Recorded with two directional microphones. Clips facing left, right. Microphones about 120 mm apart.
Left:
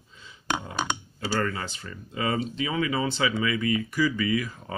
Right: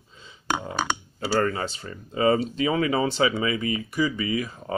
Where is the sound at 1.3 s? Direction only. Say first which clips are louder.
Right 4 dB; 35° right (ahead or behind).